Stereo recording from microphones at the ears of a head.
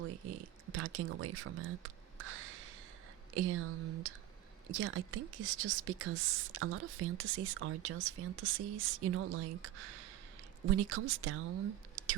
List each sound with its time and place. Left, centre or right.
0.0 s speech: right